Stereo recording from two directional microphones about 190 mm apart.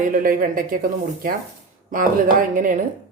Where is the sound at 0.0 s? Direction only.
45° right (ahead or behind).